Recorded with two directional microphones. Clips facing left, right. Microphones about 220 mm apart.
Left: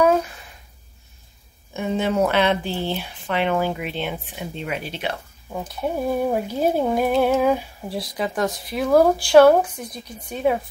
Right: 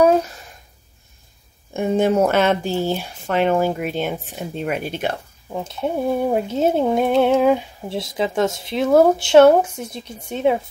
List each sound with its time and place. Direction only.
1.7 s speech: 50° right (ahead or behind)
5.6 s speech: 25° right (ahead or behind)